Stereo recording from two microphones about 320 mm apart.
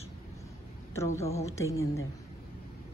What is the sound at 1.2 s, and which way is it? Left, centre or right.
Speech, centre.